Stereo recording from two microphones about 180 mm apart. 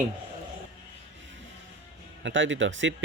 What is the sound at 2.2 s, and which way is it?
Speech, 90° right.